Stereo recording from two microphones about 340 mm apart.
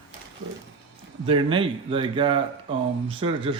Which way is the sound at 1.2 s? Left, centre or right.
Centre.